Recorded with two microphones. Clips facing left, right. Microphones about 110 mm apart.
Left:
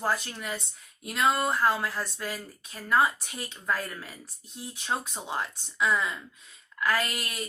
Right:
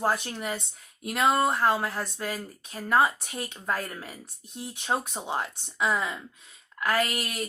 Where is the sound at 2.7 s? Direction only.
25° right (ahead or behind).